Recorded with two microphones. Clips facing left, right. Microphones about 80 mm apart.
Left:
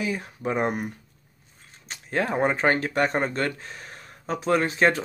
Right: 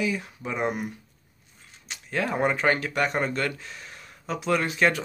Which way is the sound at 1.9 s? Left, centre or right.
Left.